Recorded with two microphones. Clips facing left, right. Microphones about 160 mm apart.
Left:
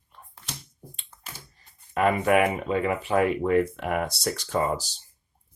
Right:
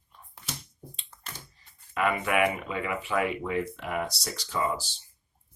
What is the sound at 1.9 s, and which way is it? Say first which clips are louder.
Speech: left 6 dB; 40° left (ahead or behind).